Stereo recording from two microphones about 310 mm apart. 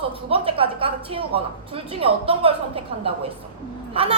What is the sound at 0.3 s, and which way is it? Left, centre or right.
A woman's voice, centre.